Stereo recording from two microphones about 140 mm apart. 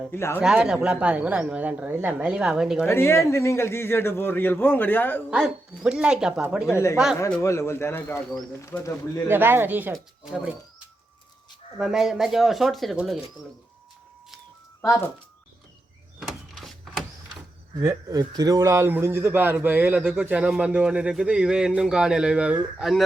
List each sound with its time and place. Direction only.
0.1 s a man's voice: 15° left (ahead or behind)
0.4 s a man's voice: 5° right (ahead or behind)
2.8 s a man's voice: 20° left (ahead or behind)
5.3 s speech: 5° right (ahead or behind)
6.7 s a man's voice: 20° left (ahead or behind)
6.9 s speech: 5° right (ahead or behind)
7.3 s a man's voice: 20° left (ahead or behind)
9.3 s a man's voice: 15° right (ahead or behind)
11.8 s speech: 5° right (ahead or behind)
16.2 s printer: centre (ahead or behind)
17.7 s a man's voice: 25° right (ahead or behind); by 23.0 s 5° right (ahead or behind)